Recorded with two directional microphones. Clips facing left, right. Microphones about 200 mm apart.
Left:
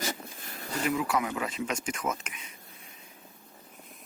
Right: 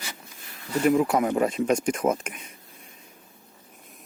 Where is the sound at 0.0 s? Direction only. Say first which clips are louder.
Left 7 dB; 45° left (ahead or behind).